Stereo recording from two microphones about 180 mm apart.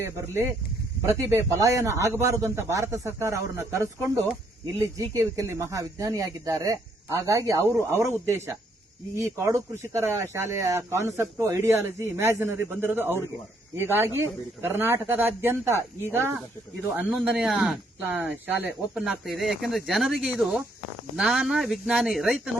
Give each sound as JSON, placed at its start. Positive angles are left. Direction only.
{"t": 1.0, "sound": "speech", "side_deg": -15}